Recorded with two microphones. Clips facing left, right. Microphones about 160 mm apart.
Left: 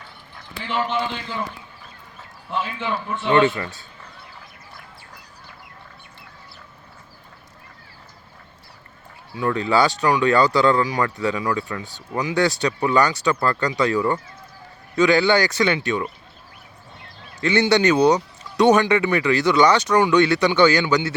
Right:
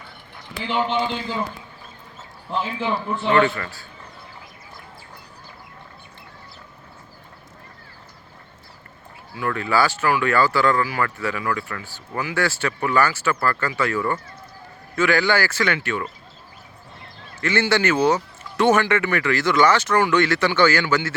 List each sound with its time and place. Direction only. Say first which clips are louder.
0.6 s a man's voice: right 2 dB; centre (ahead or behind)
2.5 s a man's voice: right 1 dB; centre (ahead or behind)
3.3 s speech: left 2 dB; 20° left (ahead or behind)
9.4 s speech: left 2 dB; 20° left (ahead or behind)
17.4 s speech: left 3 dB; 15° left (ahead or behind)